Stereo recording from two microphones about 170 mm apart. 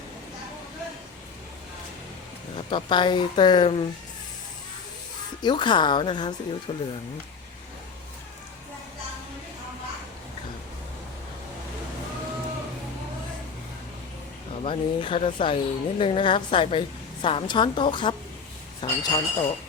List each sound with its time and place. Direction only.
2.6 s speech: 30° left (ahead or behind)
5.4 s speech: 25° left (ahead or behind)
14.6 s speech: 30° left (ahead or behind)